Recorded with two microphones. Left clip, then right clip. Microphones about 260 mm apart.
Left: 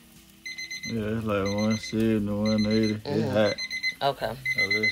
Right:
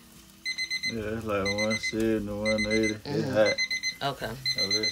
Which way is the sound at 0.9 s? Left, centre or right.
Left.